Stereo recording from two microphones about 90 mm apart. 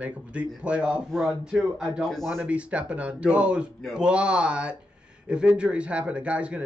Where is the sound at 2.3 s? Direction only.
15° right (ahead or behind).